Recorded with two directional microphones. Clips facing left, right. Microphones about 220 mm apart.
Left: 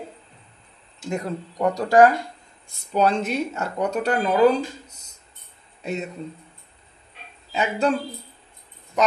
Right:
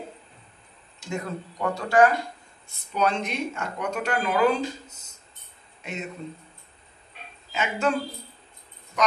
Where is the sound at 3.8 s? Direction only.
35° left (ahead or behind).